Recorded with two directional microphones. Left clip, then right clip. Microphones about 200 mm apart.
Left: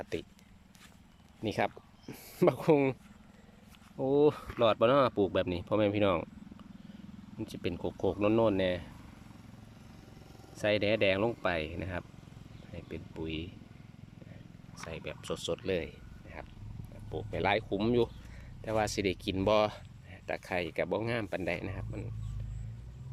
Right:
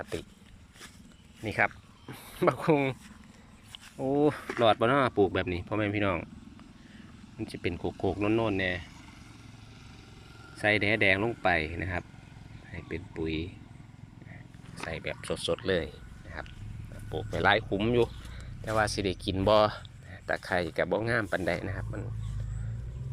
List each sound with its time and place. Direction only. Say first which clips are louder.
0.0 s speech: right 1 dB; 20° left (ahead or behind)
1.5 s speech: right 4 dB; 30° left (ahead or behind)
7.3 s speech: right 3 dB; 15° left (ahead or behind)
10.6 s speech: right 3 dB; 10° left (ahead or behind)
14.8 s speech: right 5 dB; 10° left (ahead or behind)